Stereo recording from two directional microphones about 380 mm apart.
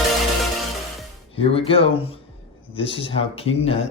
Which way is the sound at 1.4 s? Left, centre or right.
Centre.